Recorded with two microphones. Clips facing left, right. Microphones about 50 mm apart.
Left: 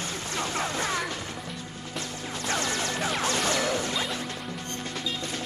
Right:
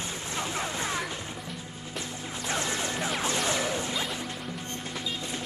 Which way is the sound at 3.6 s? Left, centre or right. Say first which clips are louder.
Left 2 dB; left.